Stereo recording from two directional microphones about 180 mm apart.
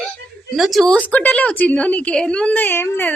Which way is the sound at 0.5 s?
Centre (ahead or behind).